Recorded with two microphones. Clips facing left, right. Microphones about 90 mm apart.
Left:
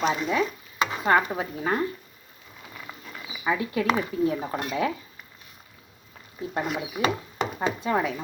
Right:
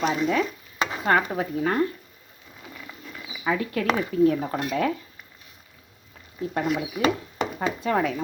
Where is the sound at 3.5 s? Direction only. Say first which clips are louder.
Even; 15° left (ahead or behind).